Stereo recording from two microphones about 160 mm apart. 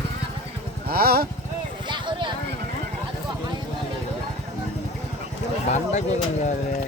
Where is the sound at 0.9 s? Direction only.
70° right (ahead or behind).